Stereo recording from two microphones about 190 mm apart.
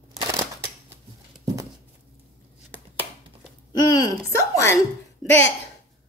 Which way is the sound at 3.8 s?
20° left (ahead or behind).